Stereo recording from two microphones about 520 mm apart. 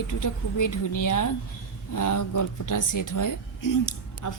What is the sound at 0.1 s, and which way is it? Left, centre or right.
Speech, left.